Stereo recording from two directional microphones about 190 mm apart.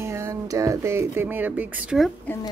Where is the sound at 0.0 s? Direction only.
15° right (ahead or behind).